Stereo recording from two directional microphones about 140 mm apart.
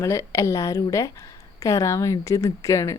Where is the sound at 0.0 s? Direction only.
20° left (ahead or behind).